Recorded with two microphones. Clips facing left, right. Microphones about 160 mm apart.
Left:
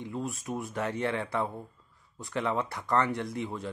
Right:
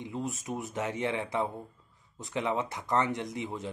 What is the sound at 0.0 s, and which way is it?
Speech, 20° right (ahead or behind).